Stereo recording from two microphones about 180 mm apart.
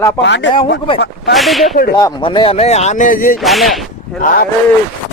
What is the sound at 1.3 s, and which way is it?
Speech, centre (ahead or behind).